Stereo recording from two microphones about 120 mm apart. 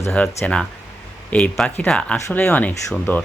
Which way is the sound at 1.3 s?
10° left (ahead or behind).